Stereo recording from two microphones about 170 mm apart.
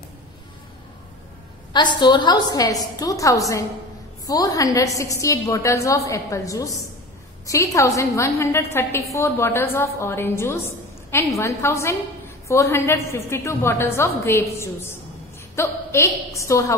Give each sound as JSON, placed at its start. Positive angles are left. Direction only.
{"t": 2.0, "sound": "a woman's voice", "side_deg": 25}